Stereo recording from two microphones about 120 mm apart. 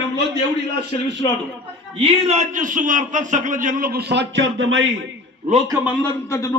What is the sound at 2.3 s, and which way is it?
Speech, 80° right.